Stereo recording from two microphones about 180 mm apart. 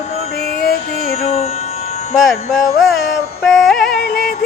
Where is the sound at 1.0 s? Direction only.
35° left (ahead or behind).